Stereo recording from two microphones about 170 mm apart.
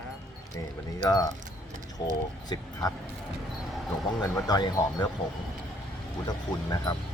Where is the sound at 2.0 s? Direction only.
25° left (ahead or behind).